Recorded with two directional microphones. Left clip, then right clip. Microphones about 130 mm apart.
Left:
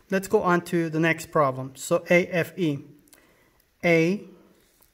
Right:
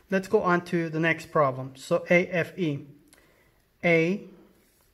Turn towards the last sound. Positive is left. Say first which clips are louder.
# left 2 dB
turn(degrees=25)  # may be behind; listen again after turning